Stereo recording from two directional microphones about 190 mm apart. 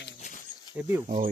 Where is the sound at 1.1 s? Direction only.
40° right (ahead or behind).